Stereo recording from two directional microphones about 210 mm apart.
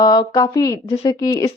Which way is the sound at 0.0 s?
20° left (ahead or behind).